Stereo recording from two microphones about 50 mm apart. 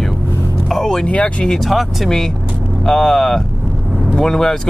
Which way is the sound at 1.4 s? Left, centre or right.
Centre.